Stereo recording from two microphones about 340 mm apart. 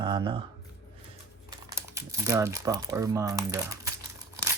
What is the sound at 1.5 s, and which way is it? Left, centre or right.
Speech, centre.